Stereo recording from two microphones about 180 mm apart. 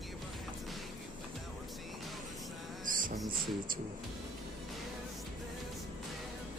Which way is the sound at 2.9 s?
50° right (ahead or behind).